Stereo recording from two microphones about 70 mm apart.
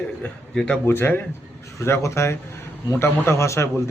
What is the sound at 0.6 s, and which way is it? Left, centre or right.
Speech, centre.